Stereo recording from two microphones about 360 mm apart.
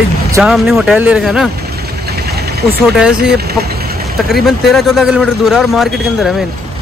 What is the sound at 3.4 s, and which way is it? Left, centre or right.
Vehicle, right.